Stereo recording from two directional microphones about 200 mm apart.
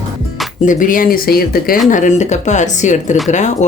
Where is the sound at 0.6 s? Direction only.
40° left (ahead or behind).